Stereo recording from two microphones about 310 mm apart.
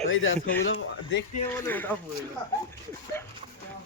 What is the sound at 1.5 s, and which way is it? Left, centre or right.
Speech, centre.